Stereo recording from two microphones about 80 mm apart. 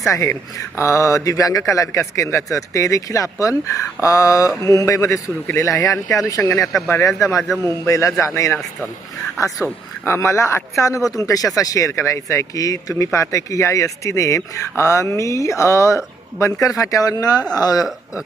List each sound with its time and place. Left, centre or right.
0.1 s speech: left
10.0 s speech: left